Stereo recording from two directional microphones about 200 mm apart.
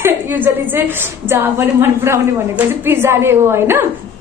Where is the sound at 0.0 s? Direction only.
10° right (ahead or behind).